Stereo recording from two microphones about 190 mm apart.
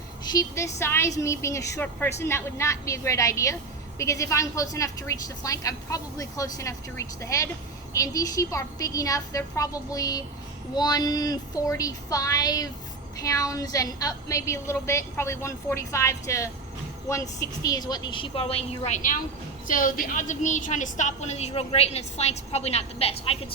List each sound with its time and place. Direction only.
0.3 s a woman's voice: 15° left (ahead or behind)